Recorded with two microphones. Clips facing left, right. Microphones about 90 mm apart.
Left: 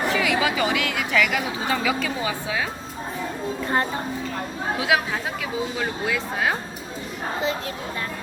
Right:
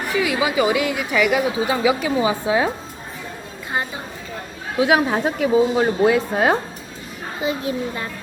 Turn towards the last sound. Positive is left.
turn(degrees=-10)  # may be behind; listen again after turning